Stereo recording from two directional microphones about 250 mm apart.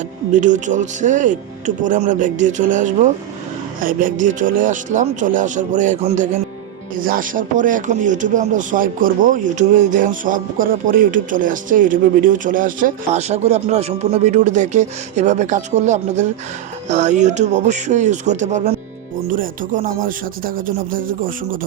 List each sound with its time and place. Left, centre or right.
0.3 s speech: right